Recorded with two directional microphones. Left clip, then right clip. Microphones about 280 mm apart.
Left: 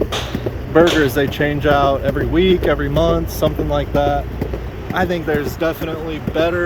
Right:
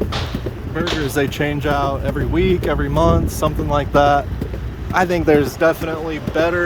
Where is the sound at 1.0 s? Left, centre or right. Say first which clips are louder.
Left 2 dB; centre.